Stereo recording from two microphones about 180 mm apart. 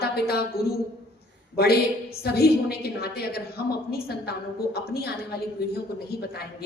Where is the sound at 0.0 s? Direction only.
60° left (ahead or behind).